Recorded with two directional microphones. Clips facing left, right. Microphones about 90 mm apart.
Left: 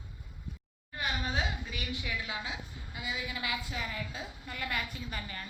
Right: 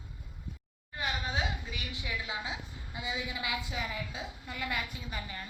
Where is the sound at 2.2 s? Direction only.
25° right (ahead or behind).